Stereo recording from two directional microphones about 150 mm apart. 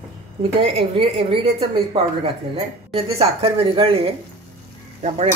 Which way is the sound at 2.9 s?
40° right (ahead or behind).